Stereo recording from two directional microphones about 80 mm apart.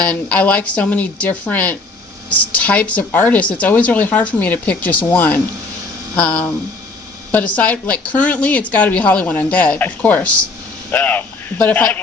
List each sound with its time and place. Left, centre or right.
0.0 s speech: centre